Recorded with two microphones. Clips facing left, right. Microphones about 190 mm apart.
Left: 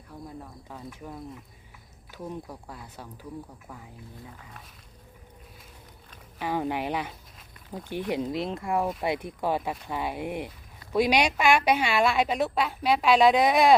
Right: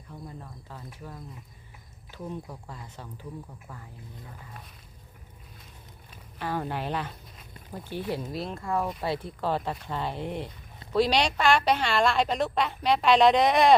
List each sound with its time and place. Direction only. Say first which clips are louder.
0.1 s a woman's voice: left 2 dB; 5° left (ahead or behind)
6.4 s a woman's voice: left 3 dB; 15° left (ahead or behind)
8.1 s a woman's voice: left 6 dB; 20° left (ahead or behind); by 13.7 s 5° left (ahead or behind)